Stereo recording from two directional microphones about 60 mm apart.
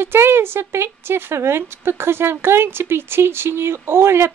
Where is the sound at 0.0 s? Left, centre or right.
Right.